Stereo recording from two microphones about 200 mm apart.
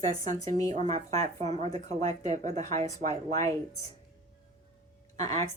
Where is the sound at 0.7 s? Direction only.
35° right (ahead or behind).